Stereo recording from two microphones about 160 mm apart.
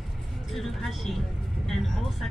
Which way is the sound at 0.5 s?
Centre (ahead or behind).